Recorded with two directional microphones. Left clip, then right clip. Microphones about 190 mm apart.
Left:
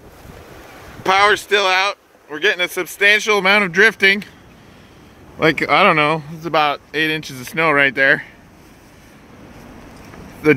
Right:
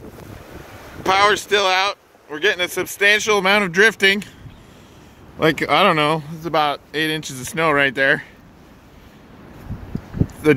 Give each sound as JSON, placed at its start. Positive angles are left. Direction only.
{"t": 1.0, "sound": "speech", "side_deg": 5}
{"t": 5.4, "sound": "speech", "side_deg": 5}